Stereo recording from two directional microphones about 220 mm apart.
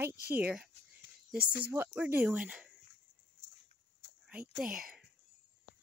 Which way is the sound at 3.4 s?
55° left (ahead or behind).